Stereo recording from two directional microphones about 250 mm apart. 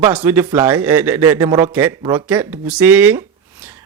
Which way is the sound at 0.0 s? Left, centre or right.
Centre.